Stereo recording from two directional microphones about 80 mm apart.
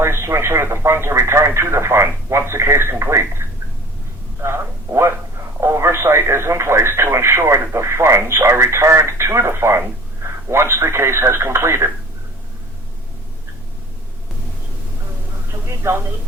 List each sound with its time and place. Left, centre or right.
0.0 s speech: right
15.9 s speech: right